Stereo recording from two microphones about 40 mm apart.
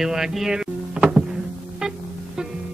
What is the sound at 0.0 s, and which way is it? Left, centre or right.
Speech, centre.